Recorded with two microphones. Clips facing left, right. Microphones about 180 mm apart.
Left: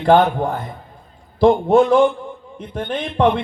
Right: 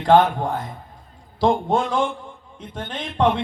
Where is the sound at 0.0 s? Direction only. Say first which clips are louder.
Left 2 dB; 60° left (ahead or behind).